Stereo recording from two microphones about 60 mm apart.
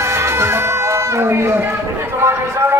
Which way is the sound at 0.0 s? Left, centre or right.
Right.